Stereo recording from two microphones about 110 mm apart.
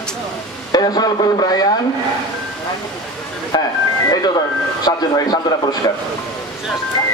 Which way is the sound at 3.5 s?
40° left (ahead or behind).